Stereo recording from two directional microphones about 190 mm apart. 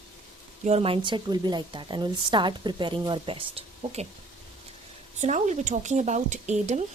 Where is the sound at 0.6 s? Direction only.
30° right (ahead or behind).